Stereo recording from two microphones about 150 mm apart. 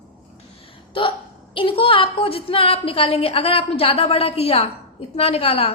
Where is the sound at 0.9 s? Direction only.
35° left (ahead or behind).